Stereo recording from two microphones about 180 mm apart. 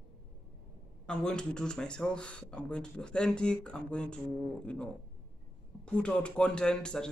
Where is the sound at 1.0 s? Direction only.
5° left (ahead or behind).